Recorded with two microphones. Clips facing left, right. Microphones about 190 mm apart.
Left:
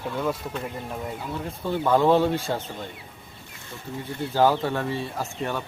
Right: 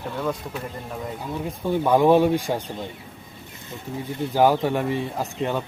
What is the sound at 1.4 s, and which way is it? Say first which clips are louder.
Speech: right 3 dB; 15° right (ahead or behind).